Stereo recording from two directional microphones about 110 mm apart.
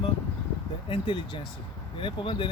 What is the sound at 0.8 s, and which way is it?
Speech, 50° left (ahead or behind).